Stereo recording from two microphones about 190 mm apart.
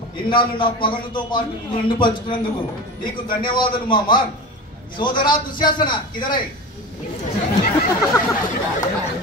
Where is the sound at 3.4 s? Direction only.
25° left (ahead or behind).